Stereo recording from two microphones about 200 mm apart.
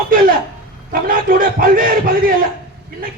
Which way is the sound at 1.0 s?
45° right (ahead or behind).